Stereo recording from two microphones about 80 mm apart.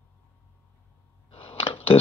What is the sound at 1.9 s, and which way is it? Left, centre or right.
Speech, left.